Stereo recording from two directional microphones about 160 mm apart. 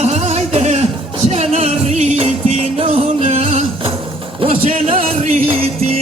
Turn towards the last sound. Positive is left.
turn(degrees=-35)  # may be behind; listen again after turning